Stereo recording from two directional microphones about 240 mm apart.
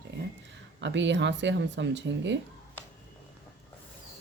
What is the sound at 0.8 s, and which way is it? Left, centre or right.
A woman's voice, right.